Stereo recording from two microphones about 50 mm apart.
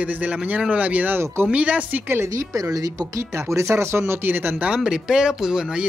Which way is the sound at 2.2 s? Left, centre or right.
Right.